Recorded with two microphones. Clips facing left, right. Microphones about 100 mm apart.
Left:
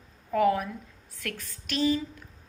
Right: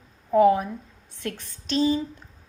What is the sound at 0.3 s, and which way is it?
A woman's voice, 25° right (ahead or behind).